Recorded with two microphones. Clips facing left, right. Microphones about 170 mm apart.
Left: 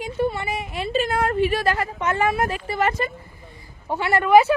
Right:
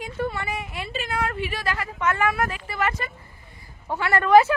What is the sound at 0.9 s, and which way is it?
Speech, 40° left (ahead or behind).